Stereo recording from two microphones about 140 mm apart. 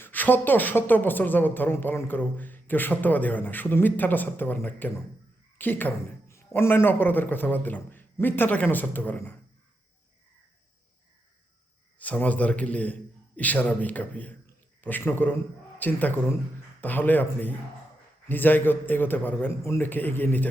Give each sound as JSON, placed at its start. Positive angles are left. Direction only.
{"t": 0.0, "sound": "a woman's voice", "side_deg": 15}
{"t": 11.9, "sound": "a woman's voice", "side_deg": 10}